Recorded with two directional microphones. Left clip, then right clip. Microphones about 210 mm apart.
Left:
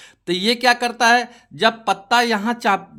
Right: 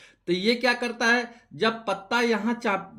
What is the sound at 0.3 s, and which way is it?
Speech, 55° left (ahead or behind).